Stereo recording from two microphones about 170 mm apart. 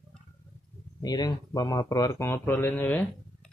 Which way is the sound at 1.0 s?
25° left (ahead or behind).